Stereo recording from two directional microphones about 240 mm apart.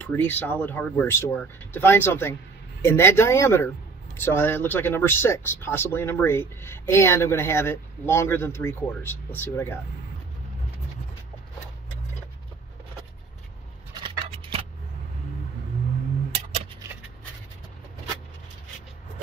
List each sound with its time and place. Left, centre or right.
0.0 s speech: centre
13.9 s scissors: right